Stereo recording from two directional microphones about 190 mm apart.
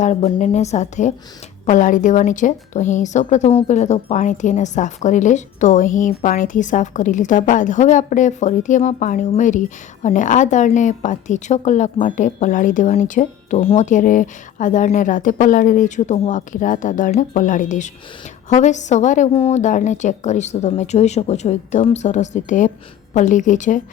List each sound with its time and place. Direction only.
0.0 s a woman's voice: 40° left (ahead or behind)